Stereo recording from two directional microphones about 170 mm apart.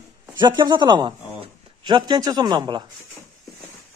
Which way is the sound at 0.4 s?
25° right (ahead or behind).